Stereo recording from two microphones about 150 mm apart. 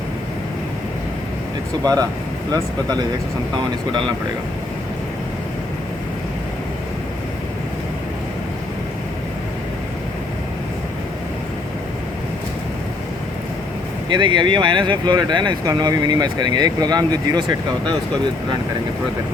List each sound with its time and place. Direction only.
1.8 s speech: 25° right (ahead or behind)
14.1 s speech: 30° right (ahead or behind)